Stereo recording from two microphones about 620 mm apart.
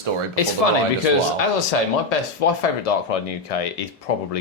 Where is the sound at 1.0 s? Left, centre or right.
Left.